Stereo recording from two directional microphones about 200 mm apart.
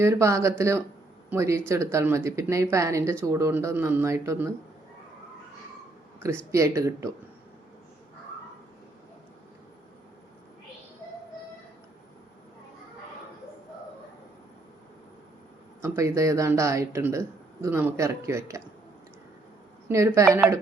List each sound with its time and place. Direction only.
0.0 s speech: 15° right (ahead or behind)
6.1 s speech: 15° right (ahead or behind)
15.8 s speech: 15° right (ahead or behind)
19.9 s speech: 15° right (ahead or behind)